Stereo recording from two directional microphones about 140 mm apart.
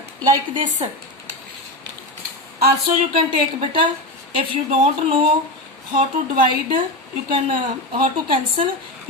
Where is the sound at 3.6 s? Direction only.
35° right (ahead or behind).